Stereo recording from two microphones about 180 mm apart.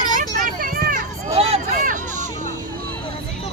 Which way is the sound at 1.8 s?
45° right (ahead or behind).